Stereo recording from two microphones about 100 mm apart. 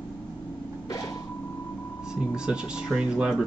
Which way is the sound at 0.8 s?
40° left (ahead or behind).